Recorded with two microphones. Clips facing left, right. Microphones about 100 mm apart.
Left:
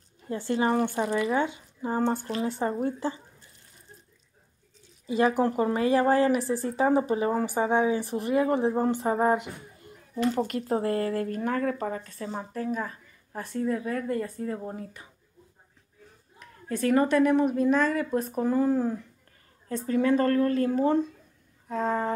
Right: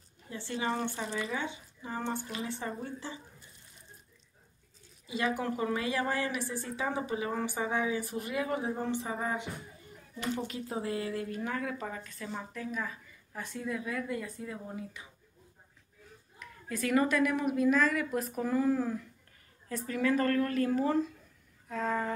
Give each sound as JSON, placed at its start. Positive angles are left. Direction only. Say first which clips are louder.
{"t": 0.3, "sound": "speech", "louder": "left 8 dB", "side_deg": 50}
{"t": 1.0, "sound": "speech", "louder": "left 9 dB", "side_deg": 90}
{"t": 1.4, "sound": "speech", "louder": "left 9 dB", "side_deg": 45}
{"t": 5.0, "sound": "speech", "louder": "left 9 dB", "side_deg": 40}
{"t": 16.3, "sound": "speech", "louder": "left 6 dB", "side_deg": 35}